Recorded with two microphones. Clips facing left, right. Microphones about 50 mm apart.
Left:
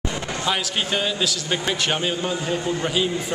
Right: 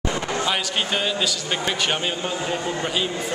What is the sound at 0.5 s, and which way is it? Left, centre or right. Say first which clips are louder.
A man's voice: left 4 dB; centre.